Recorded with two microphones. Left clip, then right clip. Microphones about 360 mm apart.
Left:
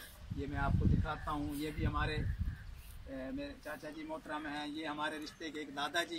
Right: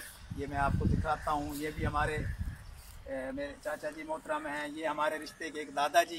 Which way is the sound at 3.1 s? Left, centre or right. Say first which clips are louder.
Right 6 dB; centre.